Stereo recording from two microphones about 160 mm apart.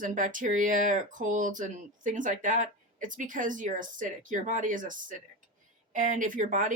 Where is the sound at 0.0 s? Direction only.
55° right (ahead or behind).